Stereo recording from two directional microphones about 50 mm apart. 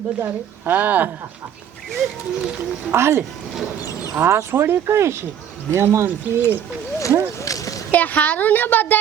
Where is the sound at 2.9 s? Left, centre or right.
Right.